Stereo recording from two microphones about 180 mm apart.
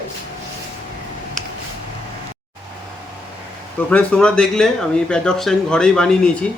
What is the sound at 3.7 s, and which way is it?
A man's voice, 5° left (ahead or behind).